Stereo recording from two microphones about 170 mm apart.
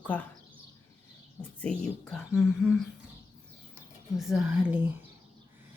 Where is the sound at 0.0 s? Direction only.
10° left (ahead or behind).